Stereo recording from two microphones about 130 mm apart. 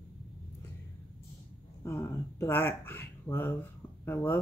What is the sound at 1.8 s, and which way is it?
Speech, 20° left (ahead or behind).